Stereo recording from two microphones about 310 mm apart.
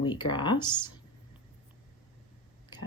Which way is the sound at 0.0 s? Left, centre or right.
Centre.